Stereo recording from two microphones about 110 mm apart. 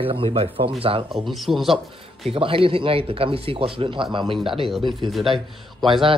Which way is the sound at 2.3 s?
55° right (ahead or behind).